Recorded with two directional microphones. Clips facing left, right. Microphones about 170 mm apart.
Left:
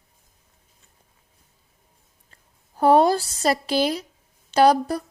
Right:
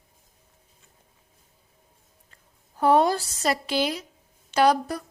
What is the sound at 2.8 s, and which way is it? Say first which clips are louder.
Speech: left 3 dB; 35° left (ahead or behind).